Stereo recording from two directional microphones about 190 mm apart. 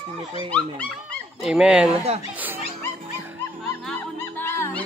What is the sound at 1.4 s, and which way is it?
Speech, 5° right (ahead or behind).